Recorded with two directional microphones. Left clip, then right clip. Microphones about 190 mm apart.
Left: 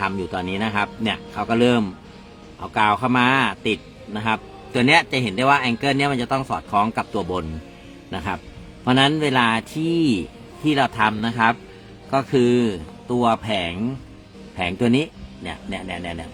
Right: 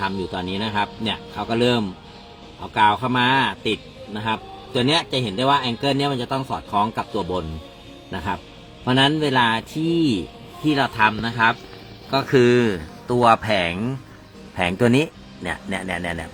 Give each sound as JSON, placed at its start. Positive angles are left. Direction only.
{"t": 0.0, "sound": "a man's voice", "side_deg": 0}
{"t": 4.8, "sound": "a man's voice", "side_deg": 45}
{"t": 5.4, "sound": "a man's voice", "side_deg": 15}
{"t": 8.1, "sound": "speech", "side_deg": 10}
{"t": 9.4, "sound": "a man's voice", "side_deg": 5}
{"t": 10.8, "sound": "a man's voice", "side_deg": 15}